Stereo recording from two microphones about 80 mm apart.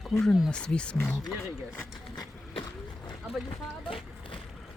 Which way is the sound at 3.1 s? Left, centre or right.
Left.